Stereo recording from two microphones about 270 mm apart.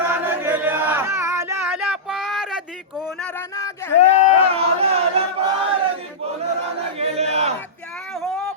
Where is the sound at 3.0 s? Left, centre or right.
Centre.